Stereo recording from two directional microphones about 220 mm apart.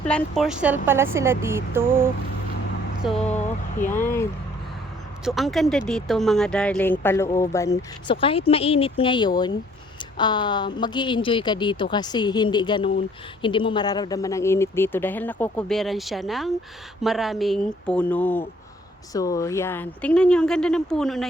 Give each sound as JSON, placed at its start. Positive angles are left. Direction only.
{"t": 0.0, "sound": "speech", "side_deg": 0}
{"t": 3.8, "sound": "speech", "side_deg": 10}
{"t": 5.2, "sound": "speech", "side_deg": 0}